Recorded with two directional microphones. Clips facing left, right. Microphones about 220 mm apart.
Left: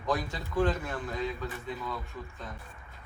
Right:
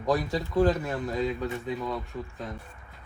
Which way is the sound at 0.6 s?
35° right (ahead or behind).